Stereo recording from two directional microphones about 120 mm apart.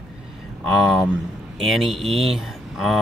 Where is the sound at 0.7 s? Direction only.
Centre (ahead or behind).